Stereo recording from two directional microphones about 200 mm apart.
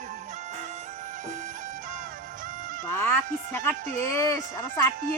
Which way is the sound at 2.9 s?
10° left (ahead or behind).